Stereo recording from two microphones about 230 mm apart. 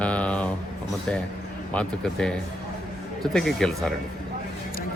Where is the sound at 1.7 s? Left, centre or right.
Centre.